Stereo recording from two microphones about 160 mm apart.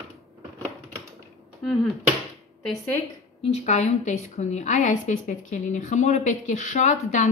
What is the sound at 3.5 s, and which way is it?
A woman's voice, 45° left (ahead or behind).